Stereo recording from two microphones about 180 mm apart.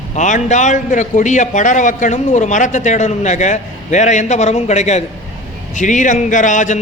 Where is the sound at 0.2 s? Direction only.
40° left (ahead or behind).